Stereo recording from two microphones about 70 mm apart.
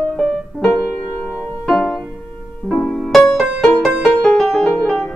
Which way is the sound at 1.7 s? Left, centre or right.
Centre.